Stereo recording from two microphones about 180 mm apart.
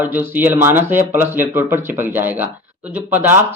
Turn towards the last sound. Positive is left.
turn(degrees=-10)  # may be behind; listen again after turning